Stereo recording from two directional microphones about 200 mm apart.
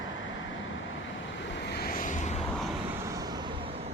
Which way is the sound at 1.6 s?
55° left (ahead or behind).